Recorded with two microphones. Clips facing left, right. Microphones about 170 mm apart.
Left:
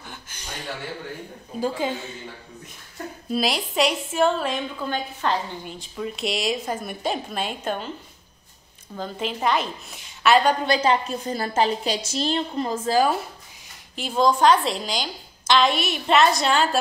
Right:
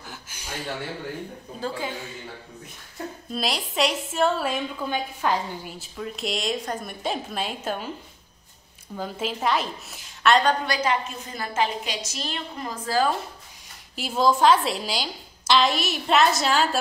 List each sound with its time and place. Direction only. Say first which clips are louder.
0.0 s a sound: even; 5° right (ahead or behind)
1.6 s a woman's voice: left 5 dB; 20° left (ahead or behind)
3.3 s a woman's voice: left 5 dB; centre (ahead or behind)
8.9 s a woman's voice: left 1 dB; 5° right (ahead or behind)
10.6 s a woman's voice: left 4 dB; 25° left (ahead or behind)
13.9 s a woman's voice: left 1 dB; 5° right (ahead or behind)